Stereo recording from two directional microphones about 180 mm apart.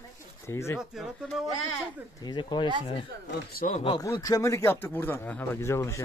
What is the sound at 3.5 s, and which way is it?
Speech, 55° left (ahead or behind).